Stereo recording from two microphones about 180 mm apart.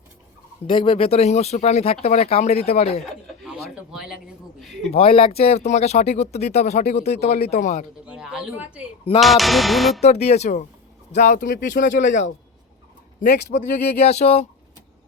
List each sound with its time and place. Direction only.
0.7 s speech: 30° left (ahead or behind)
3.9 s a sound: 5° right (ahead or behind)
4.9 s speech: 30° left (ahead or behind)
8.0 s speech: 5° right (ahead or behind)
9.2 s music: centre (ahead or behind)
10.0 s speech: 35° left (ahead or behind)
13.2 s speech: 45° left (ahead or behind)